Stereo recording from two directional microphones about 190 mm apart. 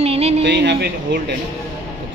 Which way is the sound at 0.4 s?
65° right (ahead or behind).